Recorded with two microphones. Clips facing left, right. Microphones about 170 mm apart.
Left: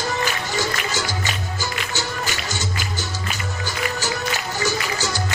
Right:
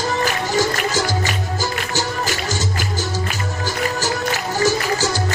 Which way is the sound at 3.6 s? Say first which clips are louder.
Right 4 dB; 40° right (ahead or behind).